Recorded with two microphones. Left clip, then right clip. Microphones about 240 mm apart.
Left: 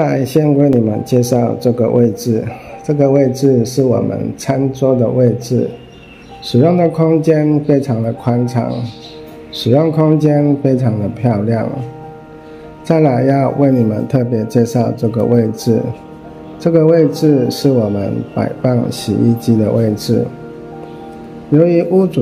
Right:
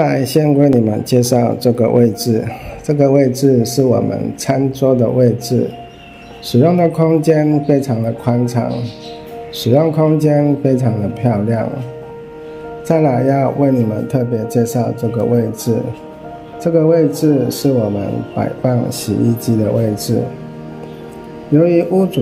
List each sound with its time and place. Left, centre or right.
0.0 s speech: centre
12.8 s speech: centre
16.6 s speech: centre
21.5 s speech: centre